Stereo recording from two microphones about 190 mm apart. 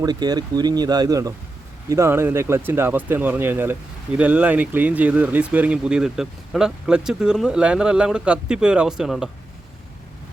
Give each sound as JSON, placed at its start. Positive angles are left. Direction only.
{"t": 0.0, "sound": "speech", "side_deg": -20}